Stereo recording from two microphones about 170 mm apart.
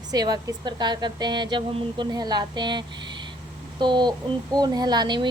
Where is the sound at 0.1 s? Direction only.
25° right (ahead or behind).